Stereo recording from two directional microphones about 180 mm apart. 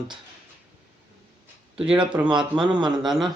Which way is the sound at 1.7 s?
5° right (ahead or behind).